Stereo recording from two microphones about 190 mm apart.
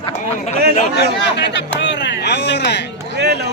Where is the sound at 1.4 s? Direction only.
65° left (ahead or behind).